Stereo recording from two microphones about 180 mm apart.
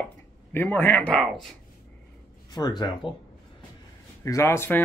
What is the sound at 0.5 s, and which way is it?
Speech, 10° left (ahead or behind).